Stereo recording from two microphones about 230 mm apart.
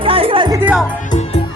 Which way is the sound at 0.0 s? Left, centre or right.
Right.